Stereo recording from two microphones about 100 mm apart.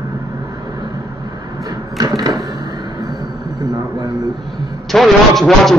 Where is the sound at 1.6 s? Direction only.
35° right (ahead or behind).